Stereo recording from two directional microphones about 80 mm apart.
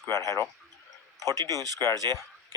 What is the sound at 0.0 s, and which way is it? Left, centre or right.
Speech, left.